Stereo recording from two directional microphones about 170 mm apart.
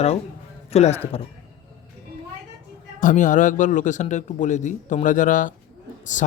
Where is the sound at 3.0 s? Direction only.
50° left (ahead or behind).